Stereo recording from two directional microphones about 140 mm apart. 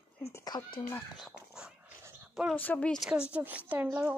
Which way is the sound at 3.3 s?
10° right (ahead or behind).